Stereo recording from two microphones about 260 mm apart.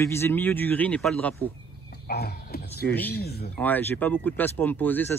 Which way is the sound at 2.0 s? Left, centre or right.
Left.